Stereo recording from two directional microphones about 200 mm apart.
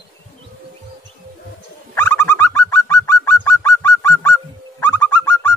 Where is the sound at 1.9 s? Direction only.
10° left (ahead or behind).